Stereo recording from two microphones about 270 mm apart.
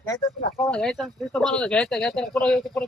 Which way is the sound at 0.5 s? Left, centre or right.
Centre.